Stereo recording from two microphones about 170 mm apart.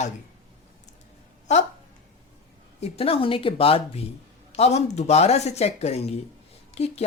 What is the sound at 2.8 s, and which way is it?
Speech, 35° left (ahead or behind).